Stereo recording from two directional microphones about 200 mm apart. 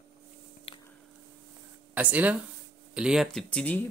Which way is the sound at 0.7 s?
30° left (ahead or behind).